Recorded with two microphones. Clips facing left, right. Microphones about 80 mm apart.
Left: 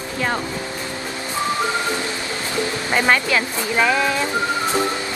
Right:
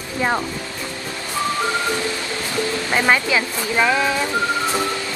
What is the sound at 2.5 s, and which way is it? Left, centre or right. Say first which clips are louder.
Speech: even; centre.